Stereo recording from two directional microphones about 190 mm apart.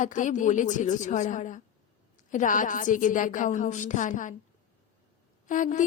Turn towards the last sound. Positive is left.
turn(degrees=40)  # may be behind; listen again after turning